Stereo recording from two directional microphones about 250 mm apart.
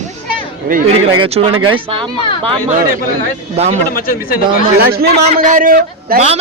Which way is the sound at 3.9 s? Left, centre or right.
Left.